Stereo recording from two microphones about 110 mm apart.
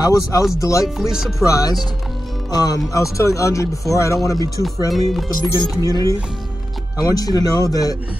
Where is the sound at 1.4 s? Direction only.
30° left (ahead or behind).